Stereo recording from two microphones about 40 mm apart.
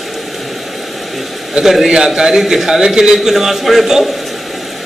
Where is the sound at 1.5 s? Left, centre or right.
Centre.